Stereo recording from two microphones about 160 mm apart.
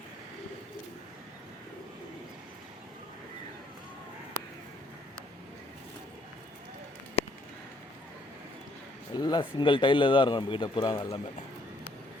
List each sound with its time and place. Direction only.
9.1 s speech: 25° left (ahead or behind)